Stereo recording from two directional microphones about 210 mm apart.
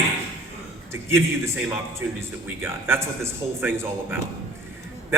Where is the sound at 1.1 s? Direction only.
10° right (ahead or behind).